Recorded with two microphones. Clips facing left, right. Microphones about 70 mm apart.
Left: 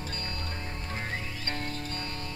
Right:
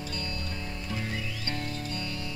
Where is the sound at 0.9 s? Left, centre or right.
Left.